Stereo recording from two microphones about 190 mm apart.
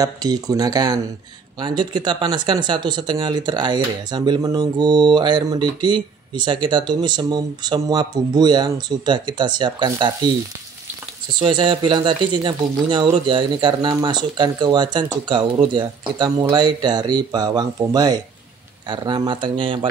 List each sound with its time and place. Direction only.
0.0 s speech: 20° right (ahead or behind)
11.3 s speech: 25° right (ahead or behind)